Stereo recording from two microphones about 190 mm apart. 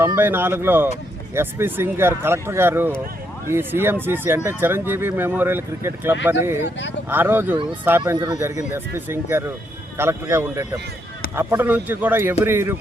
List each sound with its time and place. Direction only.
0.0 s speech: 10° right (ahead or behind)